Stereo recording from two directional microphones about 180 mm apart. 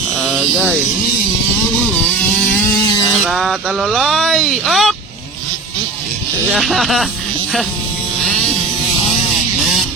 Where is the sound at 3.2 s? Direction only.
Centre (ahead or behind).